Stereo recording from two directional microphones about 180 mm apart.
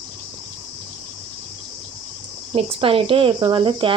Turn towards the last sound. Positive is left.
turn(degrees=-30)  # may be behind; listen again after turning